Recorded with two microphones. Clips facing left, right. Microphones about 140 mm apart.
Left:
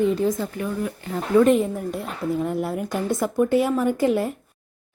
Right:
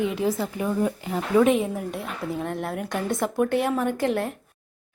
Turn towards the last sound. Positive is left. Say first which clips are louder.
# left 4 dB
turn(degrees=0)  # may be behind; listen again after turning